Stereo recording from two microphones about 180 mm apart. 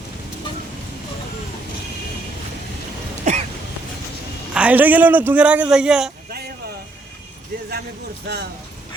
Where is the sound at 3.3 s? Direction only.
40° right (ahead or behind).